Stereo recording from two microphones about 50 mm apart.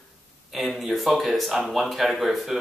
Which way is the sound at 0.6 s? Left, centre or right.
Centre.